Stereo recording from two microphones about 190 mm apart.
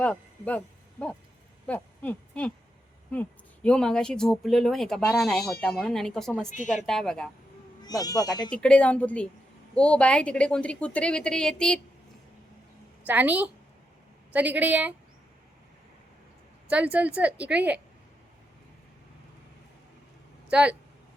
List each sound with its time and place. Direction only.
0.0 s speech: 10° left (ahead or behind)
7.8 s speech: 20° left (ahead or behind)
8.4 s speech: 5° left (ahead or behind)
13.1 s a woman's voice: 10° right (ahead or behind)
16.6 s a woman's voice: 5° right (ahead or behind)
20.5 s speech: 5° right (ahead or behind)